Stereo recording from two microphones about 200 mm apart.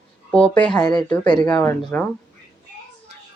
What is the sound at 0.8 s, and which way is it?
Speech, 20° left (ahead or behind).